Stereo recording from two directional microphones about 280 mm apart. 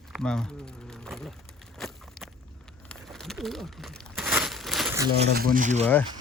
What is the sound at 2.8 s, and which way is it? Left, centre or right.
Crumpling, centre.